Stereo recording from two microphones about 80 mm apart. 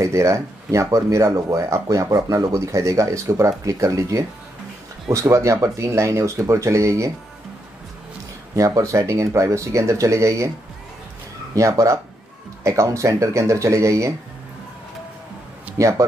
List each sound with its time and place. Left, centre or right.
0.0 s speech: right
8.5 s speech: right
11.5 s speech: right
15.8 s speech: right